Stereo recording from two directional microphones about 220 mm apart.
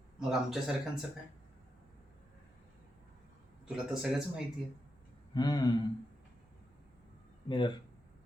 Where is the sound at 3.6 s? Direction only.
5° right (ahead or behind).